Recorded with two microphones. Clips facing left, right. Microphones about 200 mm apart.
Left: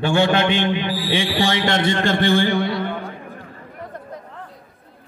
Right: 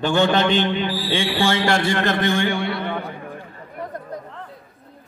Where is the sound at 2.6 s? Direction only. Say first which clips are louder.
Left 1 dB; 60° right (ahead or behind).